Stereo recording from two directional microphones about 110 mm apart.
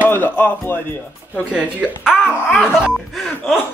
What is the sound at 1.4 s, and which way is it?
Speech, 10° right (ahead or behind).